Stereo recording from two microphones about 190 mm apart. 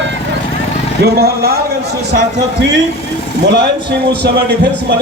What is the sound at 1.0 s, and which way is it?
Speech, 55° right (ahead or behind).